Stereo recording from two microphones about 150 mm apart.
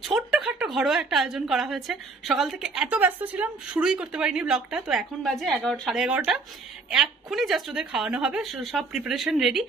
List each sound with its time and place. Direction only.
0.0 s a woman's voice: 5° right (ahead or behind)